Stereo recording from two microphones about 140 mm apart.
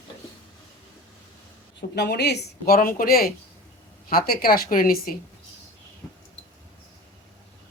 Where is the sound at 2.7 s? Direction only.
90° left.